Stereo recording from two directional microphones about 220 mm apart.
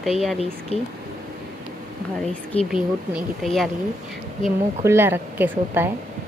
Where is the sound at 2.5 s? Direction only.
25° left (ahead or behind).